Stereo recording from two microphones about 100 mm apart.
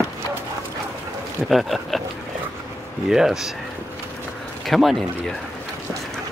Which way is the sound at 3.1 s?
5° right (ahead or behind).